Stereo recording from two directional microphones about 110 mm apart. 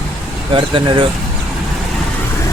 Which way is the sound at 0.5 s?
50° right (ahead or behind).